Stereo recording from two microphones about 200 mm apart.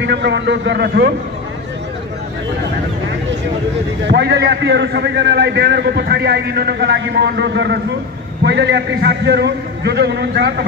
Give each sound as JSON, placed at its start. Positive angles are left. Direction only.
{"t": 0.0, "sound": "a man's voice", "side_deg": -60}
{"t": 4.1, "sound": "a man's voice", "side_deg": -55}